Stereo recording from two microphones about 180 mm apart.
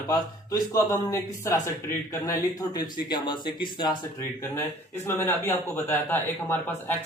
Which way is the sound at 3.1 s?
25° left (ahead or behind).